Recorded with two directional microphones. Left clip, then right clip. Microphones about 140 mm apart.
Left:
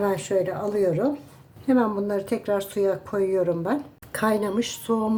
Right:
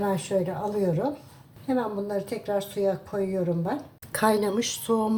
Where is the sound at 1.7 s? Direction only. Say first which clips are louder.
Left 5 dB; 45° left (ahead or behind).